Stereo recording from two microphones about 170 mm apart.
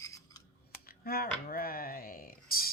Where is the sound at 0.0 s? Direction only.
20° left (ahead or behind).